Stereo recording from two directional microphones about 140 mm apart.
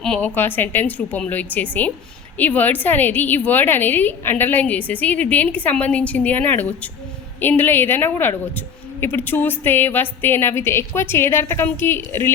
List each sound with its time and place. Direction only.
0.0 s a woman's voice: 10° left (ahead or behind)